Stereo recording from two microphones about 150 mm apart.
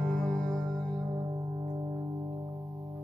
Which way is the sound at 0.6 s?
25° right (ahead or behind).